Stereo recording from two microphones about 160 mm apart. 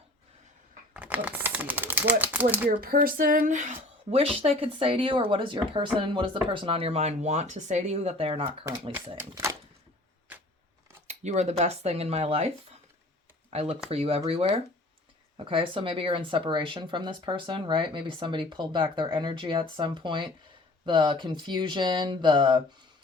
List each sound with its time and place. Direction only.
0.9 s speech: 10° right (ahead or behind)
2.6 s speech: 65° right (ahead or behind); by 8.4 s 40° right (ahead or behind)
9.1 s speech: 20° right (ahead or behind)
11.1 s speech: 45° right (ahead or behind)
13.5 s speech: 40° right (ahead or behind)